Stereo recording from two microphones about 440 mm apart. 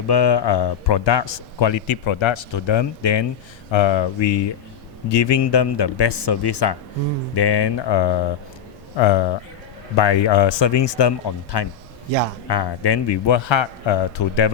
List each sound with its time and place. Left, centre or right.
0.1 s a man's voice: left
3.7 s a man's voice: left